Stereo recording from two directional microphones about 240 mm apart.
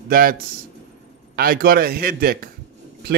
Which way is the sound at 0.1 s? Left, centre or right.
Right.